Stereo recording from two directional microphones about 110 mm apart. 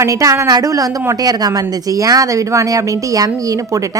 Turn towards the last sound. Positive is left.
turn(degrees=-35)  # may be behind; listen again after turning